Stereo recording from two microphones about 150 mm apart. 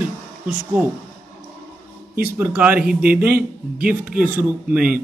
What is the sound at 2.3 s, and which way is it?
Speech, 15° right (ahead or behind).